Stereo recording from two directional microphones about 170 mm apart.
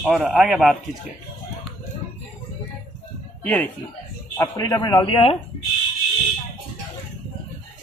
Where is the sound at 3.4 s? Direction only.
10° left (ahead or behind); by 5.4 s 30° left (ahead or behind).